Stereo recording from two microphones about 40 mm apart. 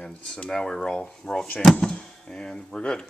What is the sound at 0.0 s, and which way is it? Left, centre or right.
Speech, left.